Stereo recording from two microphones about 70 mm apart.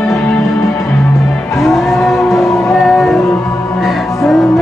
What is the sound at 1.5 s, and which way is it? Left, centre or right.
Music, centre.